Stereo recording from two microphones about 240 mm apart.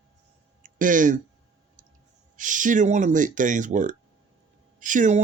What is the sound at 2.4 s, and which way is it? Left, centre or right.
Speech, right.